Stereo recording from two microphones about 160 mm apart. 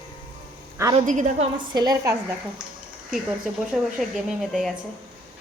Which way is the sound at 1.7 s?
25° right (ahead or behind).